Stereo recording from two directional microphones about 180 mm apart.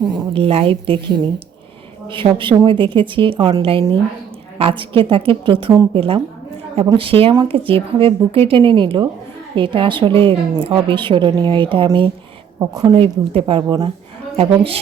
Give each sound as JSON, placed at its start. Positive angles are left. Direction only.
{"t": 0.1, "sound": "a woman's voice", "side_deg": -30}
{"t": 12.9, "sound": "a woman's voice", "side_deg": -30}